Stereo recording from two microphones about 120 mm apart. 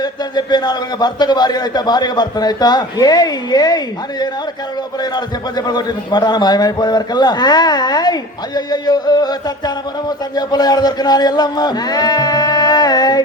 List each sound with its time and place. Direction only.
0.0 s a man's voice: 35° left (ahead or behind)
5.1 s a man's voice: 35° left (ahead or behind)